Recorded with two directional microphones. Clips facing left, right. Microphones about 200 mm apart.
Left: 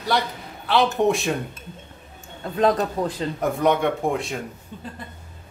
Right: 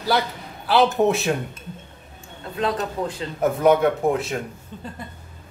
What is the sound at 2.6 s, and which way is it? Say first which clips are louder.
Speech: left 4 dB; 35° left (ahead or behind).